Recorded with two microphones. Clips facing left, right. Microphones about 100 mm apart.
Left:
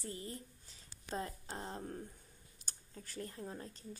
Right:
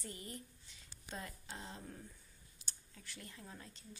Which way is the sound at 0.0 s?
30° left (ahead or behind).